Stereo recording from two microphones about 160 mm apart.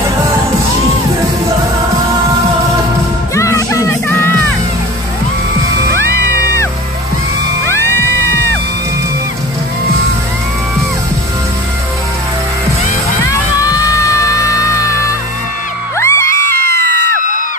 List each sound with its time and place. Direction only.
3.3 s music: 20° left (ahead or behind)
13.2 s music: 20° left (ahead or behind)
16.0 s music: 15° left (ahead or behind)